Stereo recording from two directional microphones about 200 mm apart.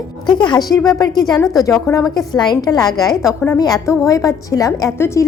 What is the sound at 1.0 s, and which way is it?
A woman's voice, 20° left (ahead or behind).